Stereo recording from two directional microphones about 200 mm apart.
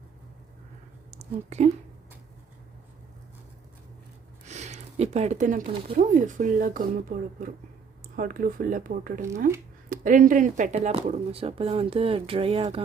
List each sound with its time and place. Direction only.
1.1 s speech: 35° right (ahead or behind)
4.4 s a sound: 35° right (ahead or behind)
5.9 s speech: 40° right (ahead or behind)